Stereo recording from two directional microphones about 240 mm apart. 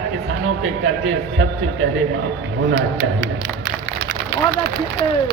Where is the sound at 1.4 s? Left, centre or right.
Right.